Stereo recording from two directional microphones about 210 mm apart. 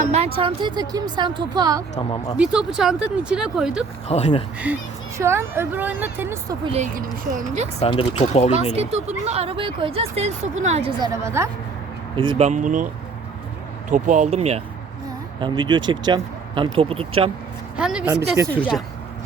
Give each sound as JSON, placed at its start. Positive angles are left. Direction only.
{"t": 0.3, "sound": "speech", "side_deg": -25}
{"t": 2.0, "sound": "speech", "side_deg": 20}
{"t": 2.4, "sound": "speech", "side_deg": -5}
{"t": 4.1, "sound": "speech", "side_deg": 30}
{"t": 4.6, "sound": "speech", "side_deg": -10}
{"t": 6.7, "sound": "a woman's voice", "side_deg": -35}
{"t": 7.8, "sound": "speech", "side_deg": 25}
{"t": 8.7, "sound": "speech", "side_deg": -30}
{"t": 11.1, "sound": "speech", "side_deg": -15}
{"t": 12.1, "sound": "speech", "side_deg": -25}
{"t": 12.5, "sound": "a woman's voice", "side_deg": -35}
{"t": 13.9, "sound": "a woman's voice", "side_deg": -35}
{"t": 17.7, "sound": "speech", "side_deg": -5}